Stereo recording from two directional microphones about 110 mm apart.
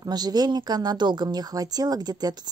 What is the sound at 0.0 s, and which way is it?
Speech, 40° right (ahead or behind).